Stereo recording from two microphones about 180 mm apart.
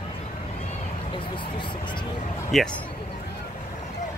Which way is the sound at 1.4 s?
25° left (ahead or behind).